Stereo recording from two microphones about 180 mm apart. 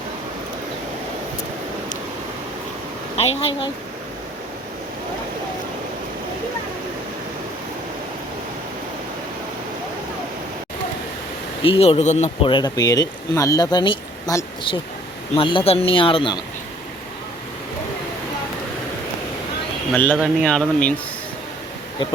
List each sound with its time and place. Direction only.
3.2 s speech: 35° left (ahead or behind)
11.6 s speech: 30° left (ahead or behind)
19.9 s speech: 10° left (ahead or behind)
20.1 s speech: centre (ahead or behind)